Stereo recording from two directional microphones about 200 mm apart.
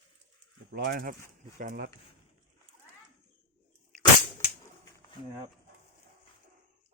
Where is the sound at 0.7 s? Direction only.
50° right (ahead or behind).